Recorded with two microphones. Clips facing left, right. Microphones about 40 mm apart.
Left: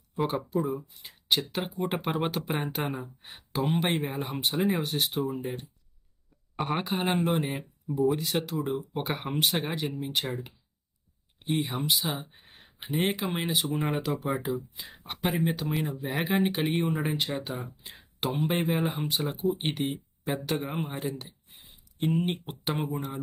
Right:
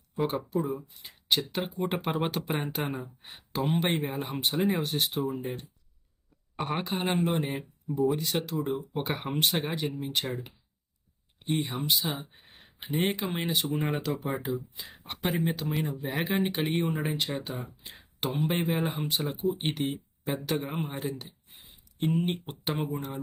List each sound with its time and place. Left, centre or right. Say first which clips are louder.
0.5 s speech: left 1 dB; centre
6.6 s speech: left 2 dB; centre